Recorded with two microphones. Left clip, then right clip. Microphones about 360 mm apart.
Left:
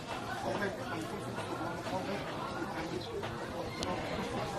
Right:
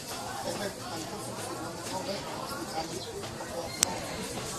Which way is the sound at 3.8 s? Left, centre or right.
Right.